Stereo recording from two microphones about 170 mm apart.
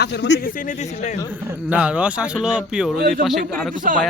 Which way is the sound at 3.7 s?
50° right (ahead or behind).